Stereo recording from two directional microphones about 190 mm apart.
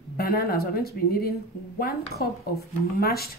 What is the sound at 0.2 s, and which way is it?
Speech, 50° left (ahead or behind).